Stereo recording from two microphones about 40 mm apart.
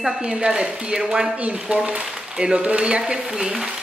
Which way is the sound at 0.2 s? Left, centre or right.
Right.